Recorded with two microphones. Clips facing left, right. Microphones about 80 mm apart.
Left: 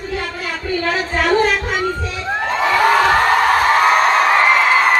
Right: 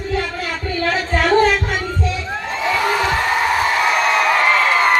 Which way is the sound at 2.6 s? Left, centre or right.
Left.